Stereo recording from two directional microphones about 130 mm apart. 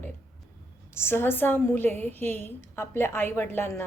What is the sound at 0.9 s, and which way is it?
A woman's voice, 15° left (ahead or behind).